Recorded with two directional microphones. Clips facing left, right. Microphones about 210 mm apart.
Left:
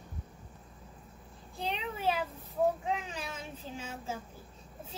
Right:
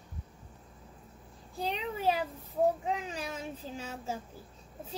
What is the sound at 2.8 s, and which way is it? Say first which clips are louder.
Child singing: right 1 dB; 40° right (ahead or behind).